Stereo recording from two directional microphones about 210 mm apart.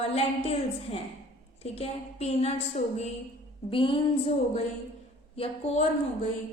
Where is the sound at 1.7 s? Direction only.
30° left (ahead or behind).